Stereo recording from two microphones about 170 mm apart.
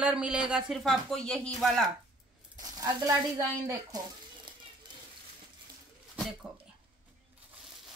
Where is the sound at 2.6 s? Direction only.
25° right (ahead or behind).